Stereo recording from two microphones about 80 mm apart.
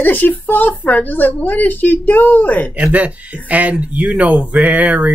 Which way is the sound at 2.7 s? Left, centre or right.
Centre.